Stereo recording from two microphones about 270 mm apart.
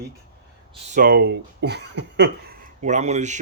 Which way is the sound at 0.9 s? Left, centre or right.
Right.